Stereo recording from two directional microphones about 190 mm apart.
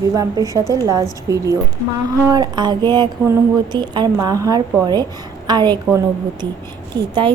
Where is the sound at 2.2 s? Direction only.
20° right (ahead or behind).